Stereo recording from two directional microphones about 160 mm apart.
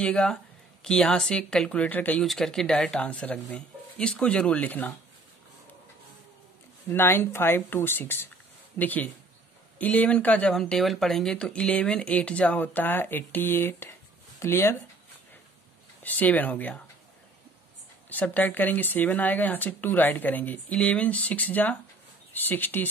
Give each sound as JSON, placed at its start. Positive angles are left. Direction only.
{"t": 0.0, "sound": "speech", "side_deg": 5}
{"t": 6.9, "sound": "speech", "side_deg": 15}
{"t": 16.0, "sound": "speech", "side_deg": 10}
{"t": 18.1, "sound": "speech", "side_deg": 10}